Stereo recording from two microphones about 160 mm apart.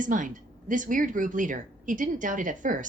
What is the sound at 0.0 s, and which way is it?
Speech, 55° right (ahead or behind).